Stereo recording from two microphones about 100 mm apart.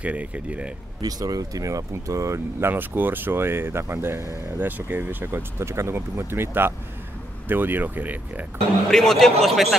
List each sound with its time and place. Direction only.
0.0 s speech: 15° right (ahead or behind)
1.0 s speech: 40° right (ahead or behind)
2.7 s speech: 20° right (ahead or behind)
8.9 s a man's voice: 5° left (ahead or behind)